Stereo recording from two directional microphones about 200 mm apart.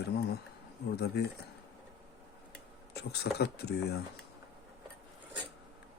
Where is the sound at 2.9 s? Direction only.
55° left (ahead or behind).